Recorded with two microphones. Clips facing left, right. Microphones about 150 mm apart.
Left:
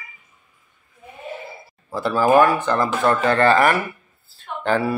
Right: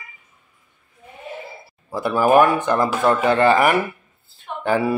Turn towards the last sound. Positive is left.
turn(degrees=-15)  # may be behind; listen again after turning